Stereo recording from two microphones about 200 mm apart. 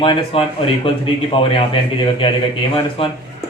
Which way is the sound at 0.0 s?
25° left (ahead or behind).